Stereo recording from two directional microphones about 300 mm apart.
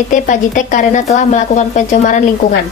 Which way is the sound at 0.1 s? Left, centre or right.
Left.